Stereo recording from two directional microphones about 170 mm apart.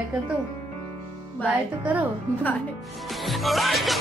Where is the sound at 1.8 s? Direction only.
10° right (ahead or behind).